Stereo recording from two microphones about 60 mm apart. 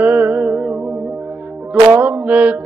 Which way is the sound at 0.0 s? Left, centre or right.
Right.